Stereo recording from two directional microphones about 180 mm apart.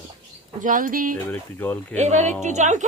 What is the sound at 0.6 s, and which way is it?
Speech, 45° right (ahead or behind).